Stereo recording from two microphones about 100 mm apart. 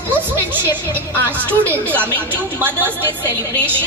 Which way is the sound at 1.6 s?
20° right (ahead or behind).